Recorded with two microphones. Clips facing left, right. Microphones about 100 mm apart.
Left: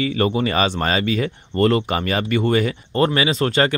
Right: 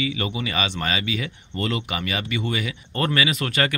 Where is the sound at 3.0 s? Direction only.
25° left (ahead or behind).